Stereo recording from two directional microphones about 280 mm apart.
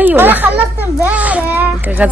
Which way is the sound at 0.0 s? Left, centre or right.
Centre.